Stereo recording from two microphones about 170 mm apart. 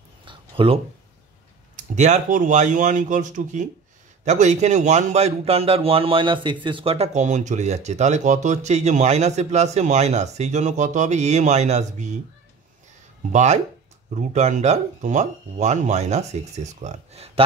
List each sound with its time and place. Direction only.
0.2 s a sound: 30° right (ahead or behind)
1.8 s a man's voice: 45° right (ahead or behind)
13.3 s speech: 45° right (ahead or behind)